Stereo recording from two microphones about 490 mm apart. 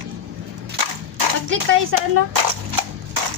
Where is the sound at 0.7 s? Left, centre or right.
Right.